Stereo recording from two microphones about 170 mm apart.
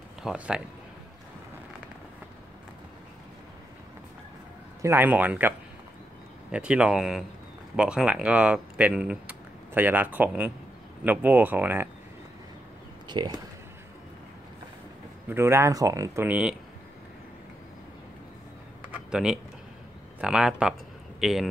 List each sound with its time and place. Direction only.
0.2 s speech: 5° right (ahead or behind)
4.8 s speech: 10° right (ahead or behind)
6.5 s speech: 5° right (ahead or behind)
13.1 s speech: 25° right (ahead or behind)
15.2 s speech: 15° right (ahead or behind)
19.0 s a man's voice: 5° right (ahead or behind)